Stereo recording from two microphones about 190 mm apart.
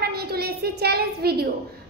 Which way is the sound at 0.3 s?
55° right (ahead or behind).